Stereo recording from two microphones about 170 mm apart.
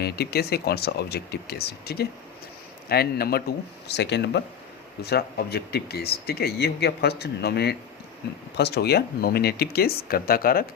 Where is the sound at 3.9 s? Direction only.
85° left.